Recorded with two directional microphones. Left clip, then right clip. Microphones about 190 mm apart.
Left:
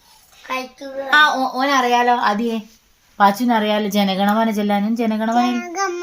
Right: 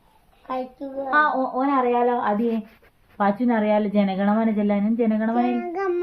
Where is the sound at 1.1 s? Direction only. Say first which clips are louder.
Left 6 dB; 55° left (ahead or behind).